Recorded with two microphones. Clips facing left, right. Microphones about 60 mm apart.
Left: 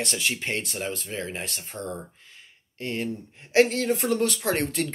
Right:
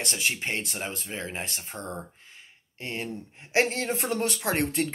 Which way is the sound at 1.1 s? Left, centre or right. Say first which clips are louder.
Left 2 dB; right.